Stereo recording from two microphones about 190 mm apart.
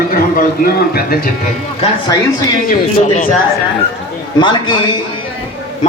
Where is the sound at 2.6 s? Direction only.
45° left (ahead or behind).